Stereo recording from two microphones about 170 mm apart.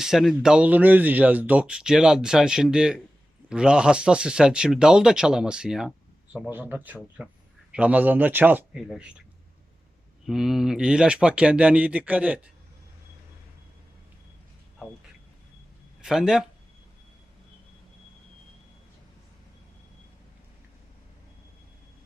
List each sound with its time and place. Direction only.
0.0 s speech: centre (ahead or behind)
10.2 s speech: centre (ahead or behind)
16.0 s speech: 5° right (ahead or behind)